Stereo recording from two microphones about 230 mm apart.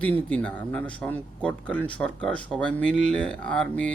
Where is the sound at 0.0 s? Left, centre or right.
Centre.